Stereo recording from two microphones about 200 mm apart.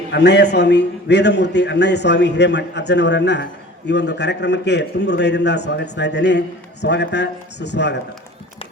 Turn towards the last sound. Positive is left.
turn(degrees=60)  # may be behind; listen again after turning